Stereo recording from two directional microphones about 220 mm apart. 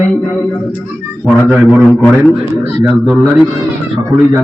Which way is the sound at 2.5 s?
15° right (ahead or behind).